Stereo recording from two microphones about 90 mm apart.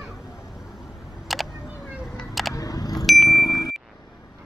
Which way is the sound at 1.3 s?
Centre (ahead or behind).